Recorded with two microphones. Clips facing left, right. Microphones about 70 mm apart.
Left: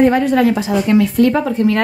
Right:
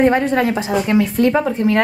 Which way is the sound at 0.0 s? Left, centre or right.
Right.